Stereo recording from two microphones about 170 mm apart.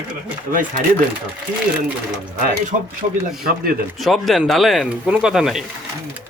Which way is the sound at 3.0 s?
55° right (ahead or behind).